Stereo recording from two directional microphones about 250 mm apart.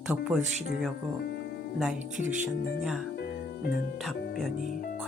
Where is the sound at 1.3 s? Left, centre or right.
Left.